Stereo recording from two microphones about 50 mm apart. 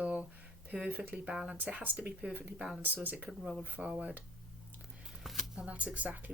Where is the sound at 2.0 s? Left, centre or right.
Right.